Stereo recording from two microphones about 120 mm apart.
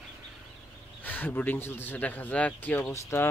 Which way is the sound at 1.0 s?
15° left (ahead or behind).